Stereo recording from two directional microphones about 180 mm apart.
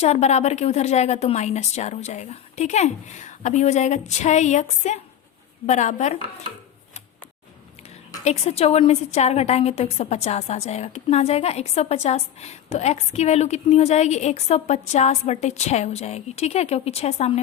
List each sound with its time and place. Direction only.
0.0 s a woman's voice: 40° left (ahead or behind)
8.2 s a woman's voice: 35° left (ahead or behind)